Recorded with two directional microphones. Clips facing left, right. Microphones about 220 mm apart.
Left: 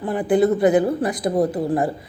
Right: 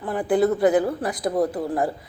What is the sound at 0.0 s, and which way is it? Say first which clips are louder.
Speech: left 3 dB; 20° left (ahead or behind).